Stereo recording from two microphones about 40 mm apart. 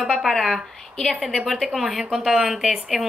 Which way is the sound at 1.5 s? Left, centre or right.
Centre.